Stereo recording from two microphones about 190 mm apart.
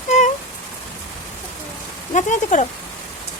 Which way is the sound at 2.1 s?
40° left (ahead or behind).